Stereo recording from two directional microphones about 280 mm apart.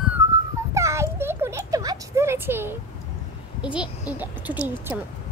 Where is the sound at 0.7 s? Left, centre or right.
Centre.